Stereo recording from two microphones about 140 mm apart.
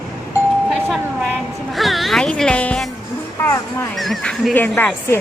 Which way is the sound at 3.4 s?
20° left (ahead or behind).